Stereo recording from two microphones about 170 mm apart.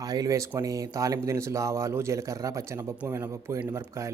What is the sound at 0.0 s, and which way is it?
Speech, 20° right (ahead or behind).